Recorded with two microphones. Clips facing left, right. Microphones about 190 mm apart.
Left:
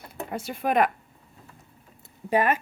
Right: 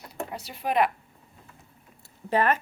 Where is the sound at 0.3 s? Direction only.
50° left (ahead or behind).